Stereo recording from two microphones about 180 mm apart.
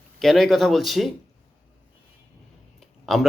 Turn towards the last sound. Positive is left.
turn(degrees=0)  # may be behind; listen again after turning